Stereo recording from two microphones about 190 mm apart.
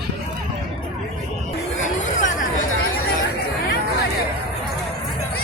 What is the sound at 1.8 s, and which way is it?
Chatter, 40° left (ahead or behind).